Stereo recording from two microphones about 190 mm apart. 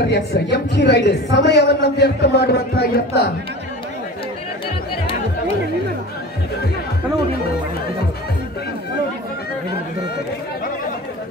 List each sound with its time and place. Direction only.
0.1 s a woman's voice: 60° left (ahead or behind)